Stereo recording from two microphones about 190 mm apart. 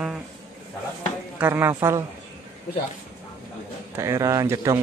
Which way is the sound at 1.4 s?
10° right (ahead or behind).